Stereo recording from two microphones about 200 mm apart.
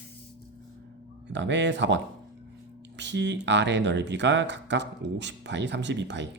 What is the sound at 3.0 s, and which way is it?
Speech, 60° right (ahead or behind).